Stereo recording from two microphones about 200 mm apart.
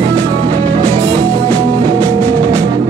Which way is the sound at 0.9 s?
15° right (ahead or behind).